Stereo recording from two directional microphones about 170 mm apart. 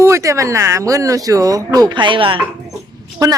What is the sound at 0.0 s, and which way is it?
Speech, 15° right (ahead or behind).